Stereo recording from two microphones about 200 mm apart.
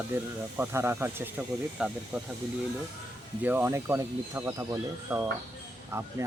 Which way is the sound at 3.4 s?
10° right (ahead or behind).